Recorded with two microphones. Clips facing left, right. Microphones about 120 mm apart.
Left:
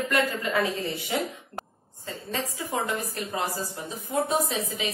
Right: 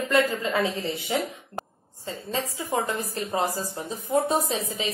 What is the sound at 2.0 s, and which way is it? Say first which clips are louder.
A woman's voice: right 2 dB; 25° right (ahead or behind).